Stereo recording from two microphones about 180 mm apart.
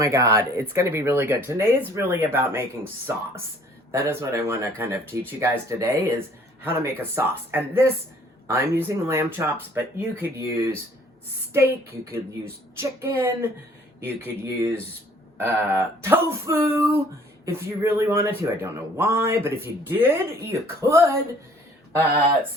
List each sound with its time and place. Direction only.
0.0 s speech: 15° right (ahead or behind)
3.9 s speech: 15° right (ahead or behind)